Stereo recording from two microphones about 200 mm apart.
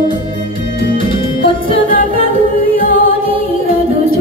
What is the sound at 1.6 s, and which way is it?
A capella, 45° left (ahead or behind).